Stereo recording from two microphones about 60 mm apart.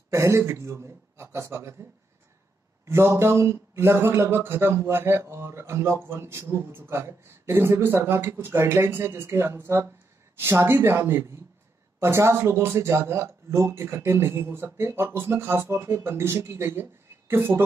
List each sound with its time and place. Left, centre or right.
0.1 s a man's voice: right
2.8 s speech: right